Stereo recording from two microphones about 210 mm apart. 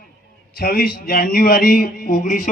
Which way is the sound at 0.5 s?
45° left (ahead or behind).